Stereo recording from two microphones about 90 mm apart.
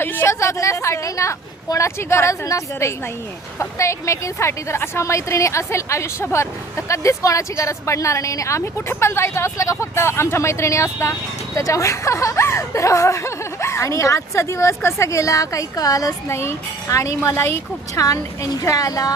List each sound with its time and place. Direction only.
0.0 s a woman's voice: 25° left (ahead or behind); by 19.1 s 40° left (ahead or behind)